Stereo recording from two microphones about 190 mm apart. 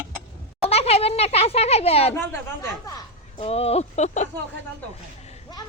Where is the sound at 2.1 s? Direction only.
10° left (ahead or behind).